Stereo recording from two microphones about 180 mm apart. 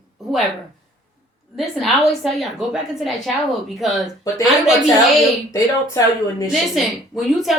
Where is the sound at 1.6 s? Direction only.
Centre (ahead or behind).